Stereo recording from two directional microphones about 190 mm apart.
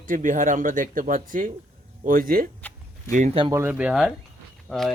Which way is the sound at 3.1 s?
40° right (ahead or behind).